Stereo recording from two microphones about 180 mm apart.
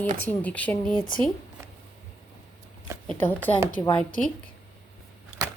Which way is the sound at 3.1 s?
10° left (ahead or behind).